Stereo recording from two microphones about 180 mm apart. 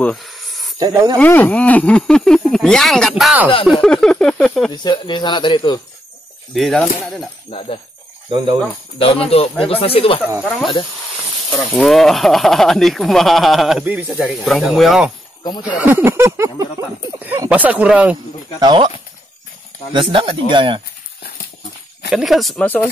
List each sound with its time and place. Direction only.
0.0 s a sound: centre (ahead or behind)
0.7 s speech: 20° right (ahead or behind)
1.2 s speech: 10° left (ahead or behind)
4.8 s speech: 25° left (ahead or behind)
6.5 s speech: centre (ahead or behind)
7.5 s speech: 35° left (ahead or behind)
8.3 s speech: 25° right (ahead or behind)
8.9 s speech: 30° left (ahead or behind)
11.5 s speech: centre (ahead or behind)
18.6 s speech: 25° right (ahead or behind)
19.9 s speech: 25° right (ahead or behind)
22.1 s speech: centre (ahead or behind)